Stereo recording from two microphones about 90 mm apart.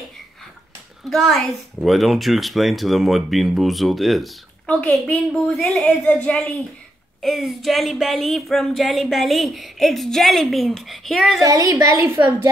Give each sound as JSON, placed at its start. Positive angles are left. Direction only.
{"t": 1.1, "sound": "speech", "side_deg": 5}
{"t": 4.6, "sound": "a woman's voice", "side_deg": 15}
{"t": 7.2, "sound": "speech", "side_deg": 0}
{"t": 11.4, "sound": "a woman's voice", "side_deg": -40}